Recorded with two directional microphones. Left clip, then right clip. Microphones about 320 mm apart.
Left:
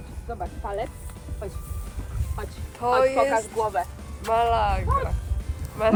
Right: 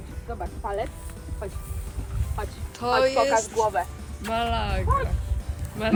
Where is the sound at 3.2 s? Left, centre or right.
Centre.